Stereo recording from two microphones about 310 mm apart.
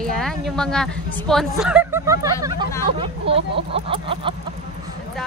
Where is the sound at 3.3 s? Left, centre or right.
Centre.